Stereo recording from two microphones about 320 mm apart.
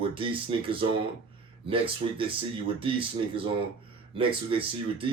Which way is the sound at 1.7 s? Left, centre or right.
Centre.